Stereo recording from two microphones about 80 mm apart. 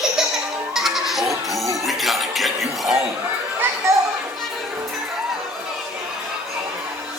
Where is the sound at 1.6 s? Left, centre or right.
Right.